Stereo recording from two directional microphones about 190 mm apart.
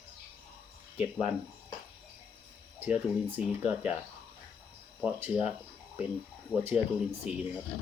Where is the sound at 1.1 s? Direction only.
30° left (ahead or behind).